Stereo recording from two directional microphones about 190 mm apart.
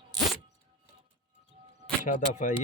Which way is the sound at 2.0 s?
40° left (ahead or behind).